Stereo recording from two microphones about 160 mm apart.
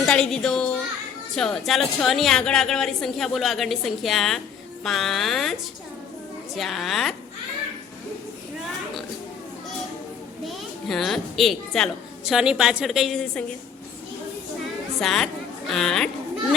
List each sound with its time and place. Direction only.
0.1 s a child's voice: 5° left (ahead or behind)
6.6 s a woman's voice: centre (ahead or behind)
10.8 s a woman's voice: centre (ahead or behind)
14.9 s a woman's voice: centre (ahead or behind)